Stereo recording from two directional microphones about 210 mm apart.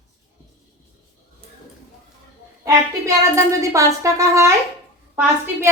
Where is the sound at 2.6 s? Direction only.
15° right (ahead or behind).